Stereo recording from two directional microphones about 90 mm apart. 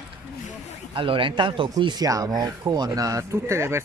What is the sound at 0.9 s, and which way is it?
Speech, 75° right (ahead or behind).